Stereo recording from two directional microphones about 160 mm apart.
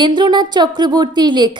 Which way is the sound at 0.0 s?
30° right (ahead or behind).